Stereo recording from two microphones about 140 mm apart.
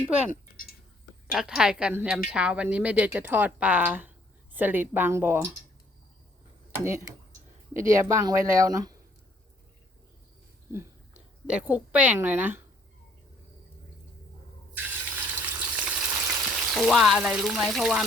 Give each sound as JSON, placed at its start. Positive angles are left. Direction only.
{"t": 0.3, "sound": "a sound", "side_deg": 90}
{"t": 1.3, "sound": "a woman's voice", "side_deg": -5}
{"t": 6.7, "sound": "speech", "side_deg": -20}
{"t": 10.7, "sound": "speech", "side_deg": -15}
{"t": 14.8, "sound": "water", "side_deg": -10}
{"t": 16.6, "sound": "frying", "side_deg": -5}